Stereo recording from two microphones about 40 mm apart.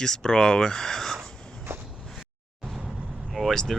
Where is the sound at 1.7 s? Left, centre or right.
Right.